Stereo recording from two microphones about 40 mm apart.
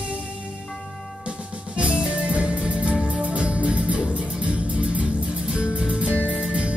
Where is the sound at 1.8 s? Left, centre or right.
Right.